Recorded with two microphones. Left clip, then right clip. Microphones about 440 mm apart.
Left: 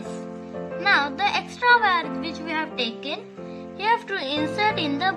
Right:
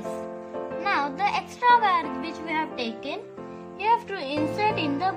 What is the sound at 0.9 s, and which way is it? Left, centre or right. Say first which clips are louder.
A woman's voice: left 4 dB; centre.